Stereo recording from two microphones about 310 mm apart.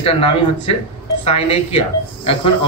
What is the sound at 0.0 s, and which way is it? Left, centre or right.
Speech, centre.